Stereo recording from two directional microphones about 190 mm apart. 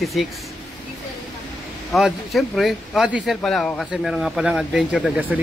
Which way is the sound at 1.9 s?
Centre (ahead or behind).